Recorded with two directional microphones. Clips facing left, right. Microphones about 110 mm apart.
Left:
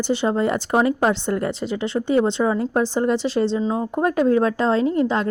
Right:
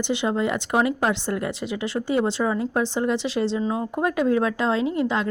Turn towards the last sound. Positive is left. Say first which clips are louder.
# left 4 dB
turn(degrees=35)  # may be behind; listen again after turning